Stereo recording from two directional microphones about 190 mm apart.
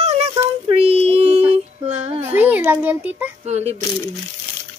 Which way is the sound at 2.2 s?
10° right (ahead or behind).